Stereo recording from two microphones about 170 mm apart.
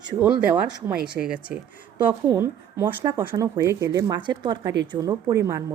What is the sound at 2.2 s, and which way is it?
Speech, 15° right (ahead or behind).